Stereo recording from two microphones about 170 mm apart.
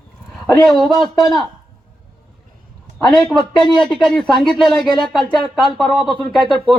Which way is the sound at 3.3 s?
25° left (ahead or behind).